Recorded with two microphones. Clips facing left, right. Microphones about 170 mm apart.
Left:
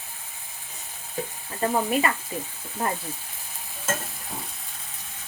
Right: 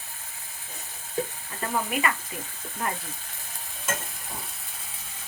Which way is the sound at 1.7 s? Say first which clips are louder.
Left 4 dB; 30° left (ahead or behind).